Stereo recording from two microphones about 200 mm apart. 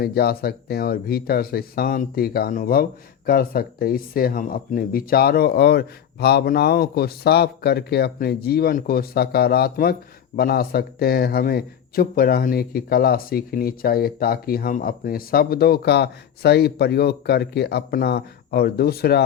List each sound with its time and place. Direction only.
0.0 s a man's voice: 50° left (ahead or behind)